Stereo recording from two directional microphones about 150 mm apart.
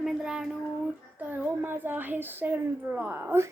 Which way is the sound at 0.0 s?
5° right (ahead or behind).